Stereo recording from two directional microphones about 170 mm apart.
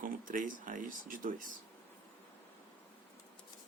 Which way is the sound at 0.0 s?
50° right (ahead or behind).